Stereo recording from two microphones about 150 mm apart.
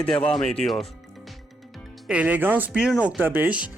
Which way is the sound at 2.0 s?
10° right (ahead or behind).